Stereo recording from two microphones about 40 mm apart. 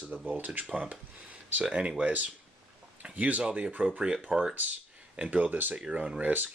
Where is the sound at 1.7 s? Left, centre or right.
Right.